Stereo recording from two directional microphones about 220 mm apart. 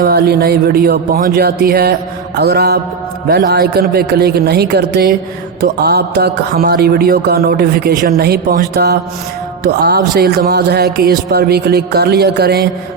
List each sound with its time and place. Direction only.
0.0 s speech: 45° right (ahead or behind)